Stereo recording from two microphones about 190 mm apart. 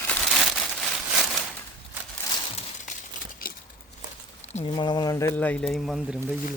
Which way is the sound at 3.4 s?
50° left (ahead or behind).